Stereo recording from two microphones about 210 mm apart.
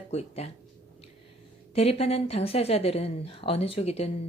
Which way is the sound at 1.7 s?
30° left (ahead or behind).